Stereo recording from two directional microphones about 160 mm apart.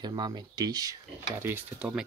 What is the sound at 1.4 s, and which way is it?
Speech, 10° right (ahead or behind).